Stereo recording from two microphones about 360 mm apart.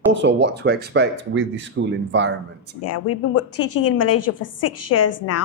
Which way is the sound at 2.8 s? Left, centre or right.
Left.